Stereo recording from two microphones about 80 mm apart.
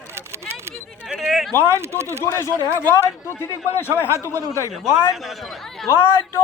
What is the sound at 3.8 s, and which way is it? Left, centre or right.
Speech, left.